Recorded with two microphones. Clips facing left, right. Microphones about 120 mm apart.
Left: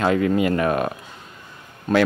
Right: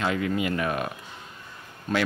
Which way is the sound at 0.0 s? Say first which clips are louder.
Left 7 dB; 45° left (ahead or behind).